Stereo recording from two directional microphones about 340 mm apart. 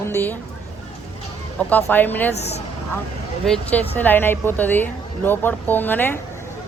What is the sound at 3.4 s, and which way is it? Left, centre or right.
A woman's voice, centre.